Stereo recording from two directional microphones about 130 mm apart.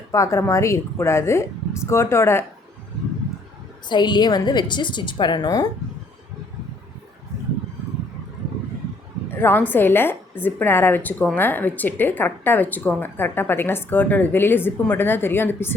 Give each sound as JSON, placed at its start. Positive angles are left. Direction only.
{"t": 0.1, "sound": "a woman's voice", "side_deg": 25}
{"t": 3.8, "sound": "a woman's voice", "side_deg": 35}
{"t": 9.3, "sound": "speech", "side_deg": 15}